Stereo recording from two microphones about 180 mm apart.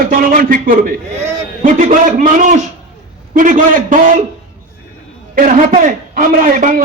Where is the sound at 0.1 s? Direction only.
50° right (ahead or behind).